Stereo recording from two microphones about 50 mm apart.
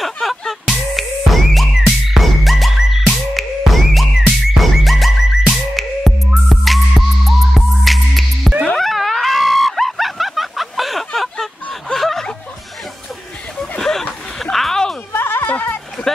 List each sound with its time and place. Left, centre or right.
0.0 s music: centre
8.7 s a sound: centre
11.9 s snicker: centre
13.6 s a sound: centre
14.4 s music: centre
15.1 s music: left